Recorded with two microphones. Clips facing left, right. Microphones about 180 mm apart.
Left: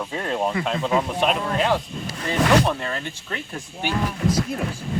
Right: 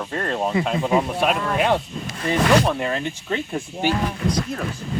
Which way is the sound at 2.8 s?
15° right (ahead or behind).